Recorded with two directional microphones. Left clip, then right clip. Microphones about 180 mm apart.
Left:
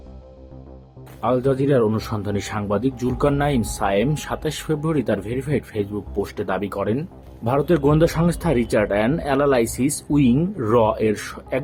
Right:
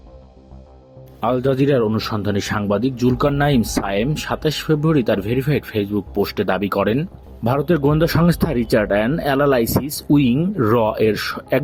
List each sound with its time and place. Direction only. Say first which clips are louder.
1.2 s speech: right 2 dB; 45° right (ahead or behind)